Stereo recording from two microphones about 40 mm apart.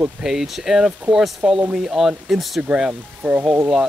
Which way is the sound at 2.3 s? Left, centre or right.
Centre.